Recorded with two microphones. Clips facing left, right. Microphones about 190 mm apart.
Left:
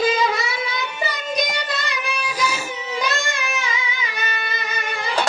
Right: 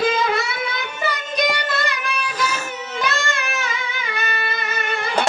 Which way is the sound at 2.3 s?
10° left (ahead or behind).